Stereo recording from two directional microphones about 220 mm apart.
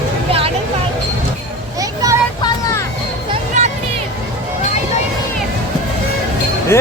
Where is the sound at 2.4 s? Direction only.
20° left (ahead or behind).